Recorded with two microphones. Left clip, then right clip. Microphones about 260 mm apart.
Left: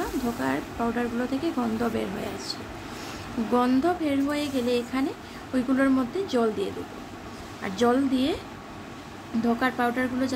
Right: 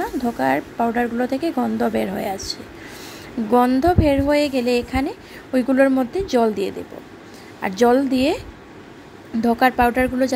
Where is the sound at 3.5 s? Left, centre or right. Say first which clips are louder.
Right 8 dB; right.